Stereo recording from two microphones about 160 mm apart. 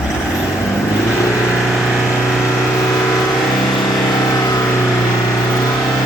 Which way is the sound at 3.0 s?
20° left (ahead or behind).